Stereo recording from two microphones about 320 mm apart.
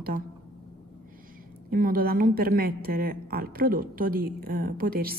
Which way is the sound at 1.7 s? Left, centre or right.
Right.